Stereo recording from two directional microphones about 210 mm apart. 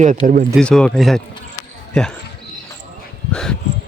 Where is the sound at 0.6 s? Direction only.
5° left (ahead or behind).